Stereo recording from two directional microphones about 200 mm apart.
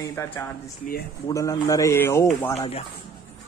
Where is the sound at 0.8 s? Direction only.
40° left (ahead or behind).